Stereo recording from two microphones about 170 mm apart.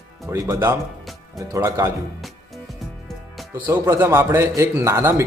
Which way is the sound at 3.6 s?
15° right (ahead or behind).